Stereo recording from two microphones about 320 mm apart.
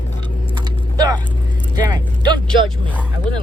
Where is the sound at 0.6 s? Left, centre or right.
Centre.